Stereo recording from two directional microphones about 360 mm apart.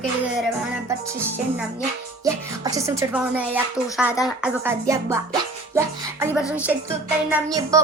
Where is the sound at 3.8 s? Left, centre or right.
Centre.